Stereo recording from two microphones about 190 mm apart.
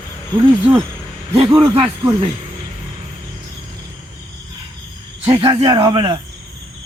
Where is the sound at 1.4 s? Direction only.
25° right (ahead or behind).